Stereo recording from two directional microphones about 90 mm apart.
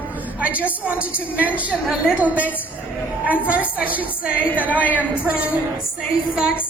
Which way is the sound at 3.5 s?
15° right (ahead or behind).